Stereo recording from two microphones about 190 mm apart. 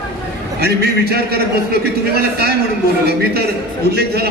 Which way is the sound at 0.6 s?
55° right (ahead or behind).